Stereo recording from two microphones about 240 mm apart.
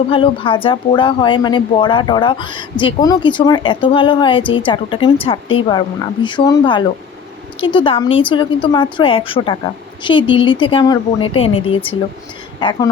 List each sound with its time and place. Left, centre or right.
0.1 s speech: left